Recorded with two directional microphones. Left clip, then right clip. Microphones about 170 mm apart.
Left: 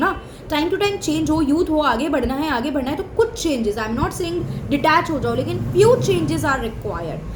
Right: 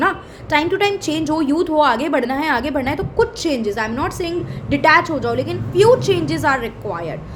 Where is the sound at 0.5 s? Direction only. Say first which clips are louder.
Right 3 dB; 20° right (ahead or behind).